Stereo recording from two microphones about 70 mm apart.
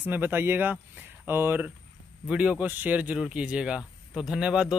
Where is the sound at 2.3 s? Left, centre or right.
Centre.